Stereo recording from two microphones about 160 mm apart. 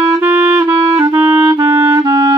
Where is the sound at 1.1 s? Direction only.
10° right (ahead or behind).